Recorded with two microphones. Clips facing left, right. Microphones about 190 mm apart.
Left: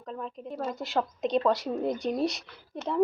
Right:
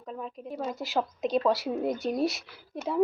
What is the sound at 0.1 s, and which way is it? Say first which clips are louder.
A woman's voice: even; 5° right (ahead or behind).